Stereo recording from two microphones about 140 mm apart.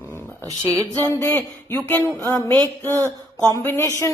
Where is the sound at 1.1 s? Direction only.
20° left (ahead or behind).